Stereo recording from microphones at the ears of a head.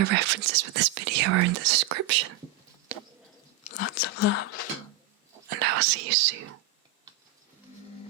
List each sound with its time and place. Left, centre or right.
0.0 s speech: right
3.6 s whispering: left
4.9 s whispering: right